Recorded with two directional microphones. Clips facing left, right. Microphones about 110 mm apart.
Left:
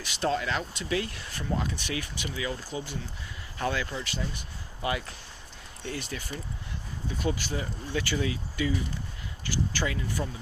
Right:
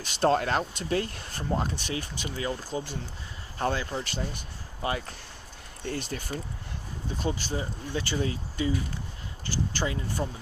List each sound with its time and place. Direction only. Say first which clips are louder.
0.0 s speech: right 4 dB; 40° right (ahead or behind)